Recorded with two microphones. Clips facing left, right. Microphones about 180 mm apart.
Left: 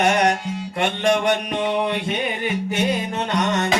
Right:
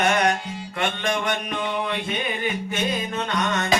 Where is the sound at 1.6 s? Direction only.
70° left (ahead or behind).